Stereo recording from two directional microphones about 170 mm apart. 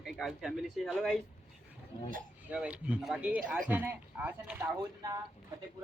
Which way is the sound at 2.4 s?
5° right (ahead or behind).